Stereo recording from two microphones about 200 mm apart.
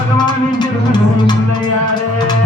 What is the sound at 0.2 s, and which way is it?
Music, 20° left (ahead or behind).